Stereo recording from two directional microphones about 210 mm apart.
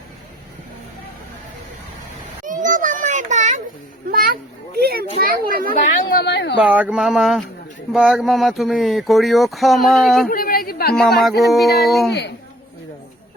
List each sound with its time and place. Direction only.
2.4 s a sound: 35° right (ahead or behind)
4.1 s children playing: 45° right (ahead or behind)
5.5 s speech: 45° right (ahead or behind)
5.7 s speech: 45° left (ahead or behind)
6.6 s speech: 5° right (ahead or behind)
10.2 s a sound: 45° left (ahead or behind)
11.2 s speech: centre (ahead or behind)